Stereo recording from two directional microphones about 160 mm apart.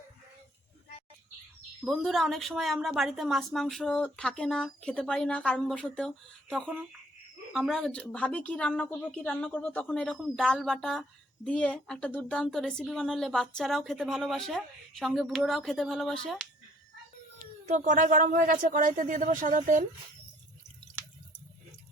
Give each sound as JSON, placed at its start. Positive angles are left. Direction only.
{"t": 1.8, "sound": "a woman's voice", "side_deg": 0}
{"t": 17.7, "sound": "speech", "side_deg": -50}